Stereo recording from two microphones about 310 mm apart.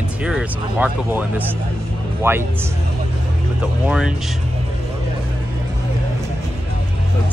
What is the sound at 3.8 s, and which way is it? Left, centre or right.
Speech, centre.